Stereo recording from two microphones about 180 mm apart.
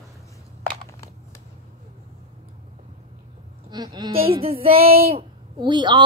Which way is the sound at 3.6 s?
25° right (ahead or behind).